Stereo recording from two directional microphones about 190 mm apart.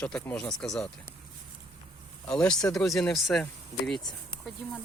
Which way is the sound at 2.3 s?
5° left (ahead or behind).